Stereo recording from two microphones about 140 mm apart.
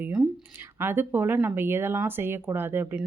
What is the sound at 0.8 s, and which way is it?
Speech, 15° right (ahead or behind).